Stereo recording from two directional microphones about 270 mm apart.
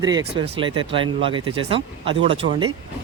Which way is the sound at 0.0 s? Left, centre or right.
Centre.